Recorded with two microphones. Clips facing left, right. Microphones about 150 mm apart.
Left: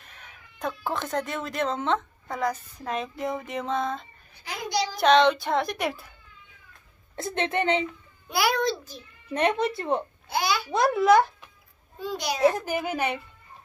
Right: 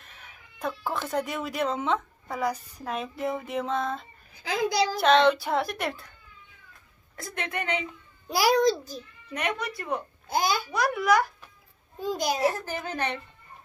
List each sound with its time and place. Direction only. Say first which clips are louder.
0.0 s a woman's voice: left 1 dB; centre (ahead or behind)
7.2 s speech: left 7 dB; 25° left (ahead or behind)
8.3 s a child's voice: right 3 dB; 40° right (ahead or behind)
9.3 s speech: left 7 dB; 30° left (ahead or behind)
10.2 s a child's voice: right 1 dB; 45° right (ahead or behind)
10.7 s speech: left 6 dB; 25° left (ahead or behind)
12.0 s a child's voice: right 2 dB; 45° right (ahead or behind)
12.4 s a woman's voice: left 4 dB; 20° left (ahead or behind)